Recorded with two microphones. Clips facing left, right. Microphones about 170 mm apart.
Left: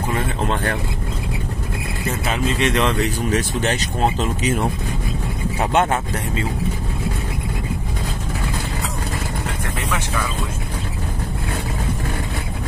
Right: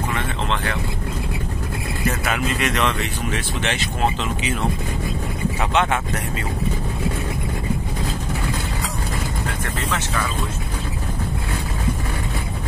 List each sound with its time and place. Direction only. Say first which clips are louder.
0.1 s vehicle: left 3 dB; 45° left (ahead or behind)
2.2 s speech: left 6 dB; 30° left (ahead or behind)
5.6 s speech: left 3 dB; 45° left (ahead or behind)